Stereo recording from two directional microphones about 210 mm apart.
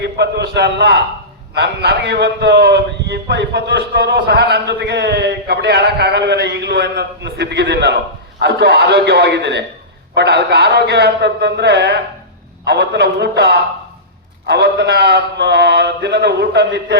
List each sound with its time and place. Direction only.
0.0 s a man's voice: 55° right (ahead or behind)